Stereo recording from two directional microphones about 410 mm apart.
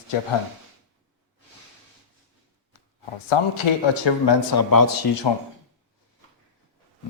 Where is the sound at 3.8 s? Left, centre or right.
Left.